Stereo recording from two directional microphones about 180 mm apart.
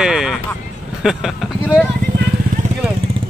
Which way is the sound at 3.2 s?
30° right (ahead or behind).